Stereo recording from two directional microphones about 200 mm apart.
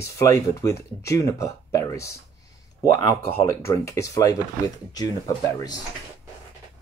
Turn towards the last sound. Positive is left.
turn(degrees=20)  # may be behind; listen again after turning